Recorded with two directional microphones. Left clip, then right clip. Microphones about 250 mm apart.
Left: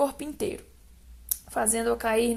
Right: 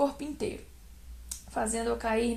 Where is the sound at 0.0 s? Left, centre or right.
Left.